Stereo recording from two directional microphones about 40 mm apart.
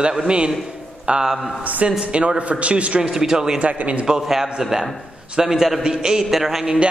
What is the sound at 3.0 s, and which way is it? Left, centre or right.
Speech, centre.